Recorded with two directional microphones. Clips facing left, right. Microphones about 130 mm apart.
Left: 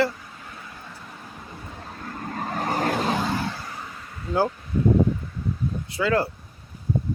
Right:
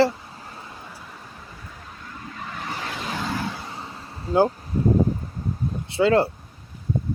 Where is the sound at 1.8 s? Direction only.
45° left (ahead or behind).